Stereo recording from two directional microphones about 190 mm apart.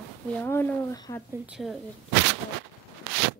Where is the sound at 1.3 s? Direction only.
5° right (ahead or behind).